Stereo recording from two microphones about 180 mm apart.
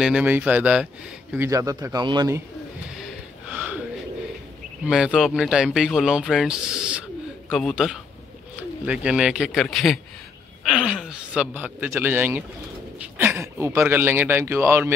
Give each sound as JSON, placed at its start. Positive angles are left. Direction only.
{"t": 0.0, "sound": "a man's voice", "side_deg": -5}
{"t": 3.0, "sound": "snort", "side_deg": -10}
{"t": 4.8, "sound": "a man's voice", "side_deg": -5}